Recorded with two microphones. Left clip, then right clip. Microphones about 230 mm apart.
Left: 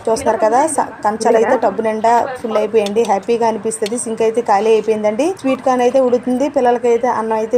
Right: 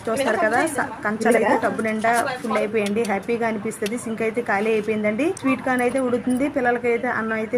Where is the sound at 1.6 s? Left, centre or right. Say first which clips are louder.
Left 7 dB; centre.